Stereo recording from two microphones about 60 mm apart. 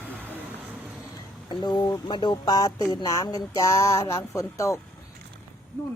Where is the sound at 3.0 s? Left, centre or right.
Left.